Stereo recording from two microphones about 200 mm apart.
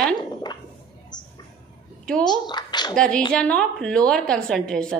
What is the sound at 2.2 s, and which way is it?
Speech, 20° left (ahead or behind).